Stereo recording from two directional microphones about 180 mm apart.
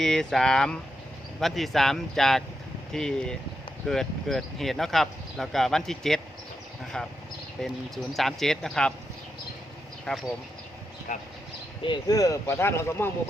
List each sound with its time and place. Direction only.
0.0 s speech: 5° left (ahead or behind)
10.1 s speech: 5° left (ahead or behind)
11.1 s speech: 45° left (ahead or behind)
11.8 s speech: 25° left (ahead or behind)